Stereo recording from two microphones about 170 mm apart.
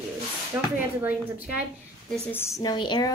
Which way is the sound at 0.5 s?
15° right (ahead or behind).